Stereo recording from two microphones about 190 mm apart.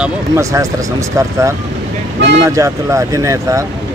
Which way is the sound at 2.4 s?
15° right (ahead or behind).